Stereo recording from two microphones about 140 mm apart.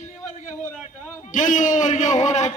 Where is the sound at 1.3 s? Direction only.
65° left (ahead or behind).